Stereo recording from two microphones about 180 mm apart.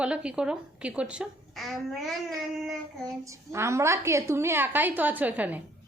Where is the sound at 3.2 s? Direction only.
15° right (ahead or behind).